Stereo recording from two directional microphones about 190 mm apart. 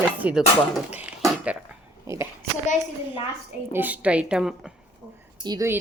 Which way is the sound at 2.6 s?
40° left (ahead or behind).